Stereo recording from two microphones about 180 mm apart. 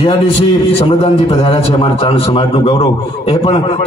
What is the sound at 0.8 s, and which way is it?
A man's voice, 30° left (ahead or behind).